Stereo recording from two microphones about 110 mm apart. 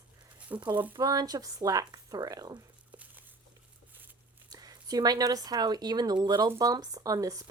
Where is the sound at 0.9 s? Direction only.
35° right (ahead or behind).